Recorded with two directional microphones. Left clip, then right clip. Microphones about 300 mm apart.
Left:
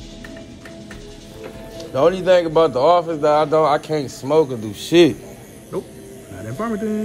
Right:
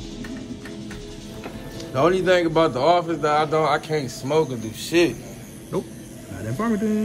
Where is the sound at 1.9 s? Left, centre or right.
Centre.